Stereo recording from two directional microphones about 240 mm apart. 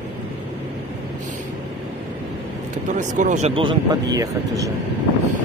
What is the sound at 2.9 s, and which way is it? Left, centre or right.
Speech, right.